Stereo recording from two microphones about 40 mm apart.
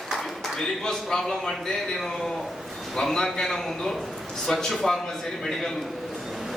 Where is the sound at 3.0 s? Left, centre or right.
Centre.